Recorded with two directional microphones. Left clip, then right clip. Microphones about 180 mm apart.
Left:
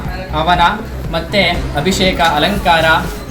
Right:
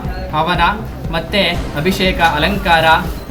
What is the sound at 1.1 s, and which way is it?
Speech, 20° right (ahead or behind).